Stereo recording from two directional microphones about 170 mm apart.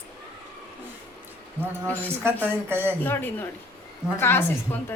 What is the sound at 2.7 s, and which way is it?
Speech, 15° right (ahead or behind).